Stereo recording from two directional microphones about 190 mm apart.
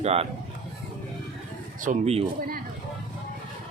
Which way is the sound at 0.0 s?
35° right (ahead or behind).